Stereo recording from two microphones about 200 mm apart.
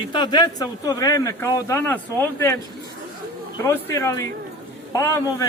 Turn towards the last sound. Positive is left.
turn(degrees=15)  # may be behind; listen again after turning